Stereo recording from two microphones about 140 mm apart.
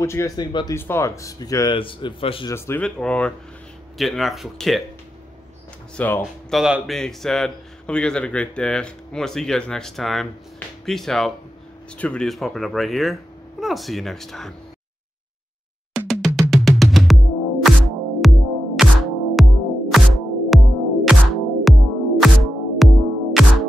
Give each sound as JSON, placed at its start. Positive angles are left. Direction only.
{"t": 0.0, "sound": "speech", "side_deg": 20}
{"t": 0.4, "sound": "a man's voice", "side_deg": 35}
{"t": 0.7, "sound": "speech", "side_deg": 15}
{"t": 1.7, "sound": "a man's voice", "side_deg": 35}
{"t": 2.4, "sound": "a man's voice", "side_deg": 15}
{"t": 5.9, "sound": "speech", "side_deg": 15}
{"t": 6.5, "sound": "a man's voice", "side_deg": 0}
{"t": 16.1, "sound": "music", "side_deg": 0}